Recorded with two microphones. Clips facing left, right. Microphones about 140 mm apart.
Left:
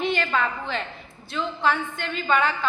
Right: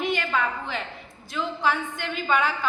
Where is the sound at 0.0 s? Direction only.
15° right (ahead or behind).